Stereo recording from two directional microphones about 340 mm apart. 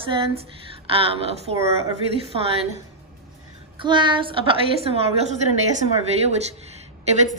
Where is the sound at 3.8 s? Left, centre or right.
Centre.